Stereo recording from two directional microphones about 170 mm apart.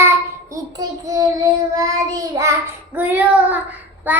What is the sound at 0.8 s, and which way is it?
Child singing, 20° right (ahead or behind).